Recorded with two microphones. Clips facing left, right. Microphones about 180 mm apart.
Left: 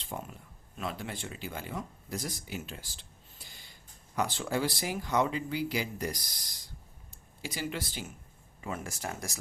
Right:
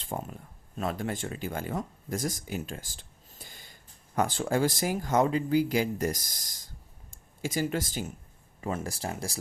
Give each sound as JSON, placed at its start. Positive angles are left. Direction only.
{"t": 0.0, "sound": "speech", "side_deg": -45}